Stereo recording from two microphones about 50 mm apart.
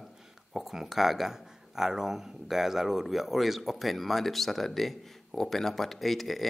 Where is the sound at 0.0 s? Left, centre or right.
Centre.